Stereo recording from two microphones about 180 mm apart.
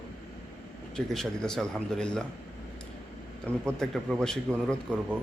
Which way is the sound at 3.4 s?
5° left (ahead or behind).